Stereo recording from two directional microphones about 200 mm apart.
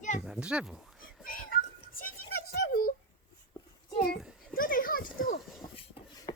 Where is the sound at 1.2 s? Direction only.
45° left (ahead or behind).